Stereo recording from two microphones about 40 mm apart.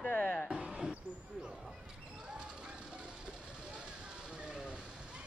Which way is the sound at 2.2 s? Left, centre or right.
Right.